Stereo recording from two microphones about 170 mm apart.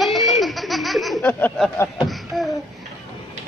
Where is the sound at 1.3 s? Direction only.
10° left (ahead or behind).